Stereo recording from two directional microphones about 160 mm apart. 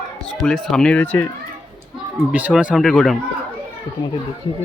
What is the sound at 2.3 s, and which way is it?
Speech, 5° right (ahead or behind).